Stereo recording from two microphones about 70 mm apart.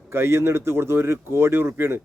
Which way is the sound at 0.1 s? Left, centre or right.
Right.